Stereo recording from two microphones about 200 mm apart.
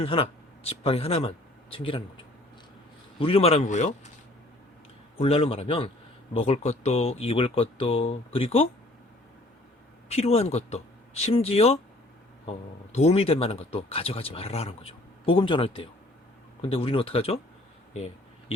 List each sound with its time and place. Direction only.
0.0 s speech: 30° left (ahead or behind)
5.1 s speech: 30° left (ahead or behind)
10.1 s speech: 30° left (ahead or behind)